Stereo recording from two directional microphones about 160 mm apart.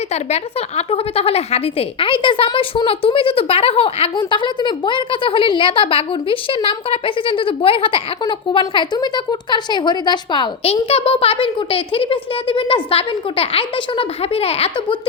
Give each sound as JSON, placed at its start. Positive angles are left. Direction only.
{"t": 0.1, "sound": "a woman's voice", "side_deg": 45}